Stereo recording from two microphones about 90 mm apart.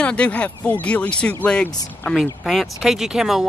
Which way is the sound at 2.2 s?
Centre (ahead or behind).